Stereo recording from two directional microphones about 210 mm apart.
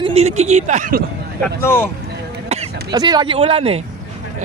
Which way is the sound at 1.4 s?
10° left (ahead or behind).